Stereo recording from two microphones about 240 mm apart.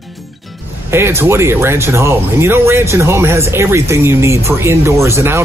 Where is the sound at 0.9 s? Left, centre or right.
Centre.